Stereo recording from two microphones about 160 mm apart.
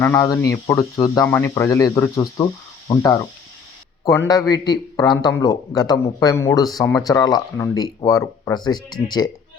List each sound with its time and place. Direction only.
0.0 s speech: 20° left (ahead or behind)